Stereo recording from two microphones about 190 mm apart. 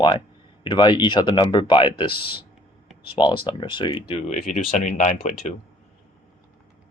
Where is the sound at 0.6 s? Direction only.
25° left (ahead or behind).